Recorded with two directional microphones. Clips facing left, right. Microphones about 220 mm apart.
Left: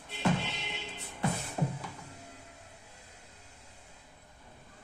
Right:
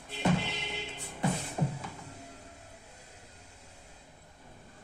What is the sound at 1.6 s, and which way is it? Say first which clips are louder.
Music: even; centre (ahead or behind).